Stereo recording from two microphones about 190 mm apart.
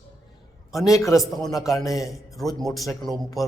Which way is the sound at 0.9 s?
15° left (ahead or behind).